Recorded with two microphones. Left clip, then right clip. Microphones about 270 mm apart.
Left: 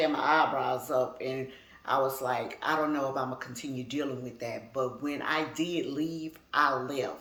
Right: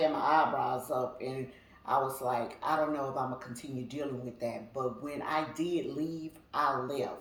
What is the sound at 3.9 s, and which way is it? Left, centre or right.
Speech, left.